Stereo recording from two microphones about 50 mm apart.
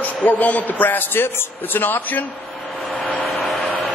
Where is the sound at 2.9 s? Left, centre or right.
Left.